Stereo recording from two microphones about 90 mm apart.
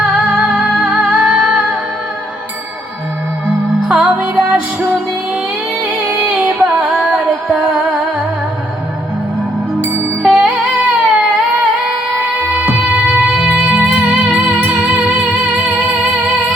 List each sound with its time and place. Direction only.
0.3 s music: 10° right (ahead or behind)
3.8 s music: 10° right (ahead or behind)
9.8 s music: 20° right (ahead or behind)
10.3 s music: 10° right (ahead or behind)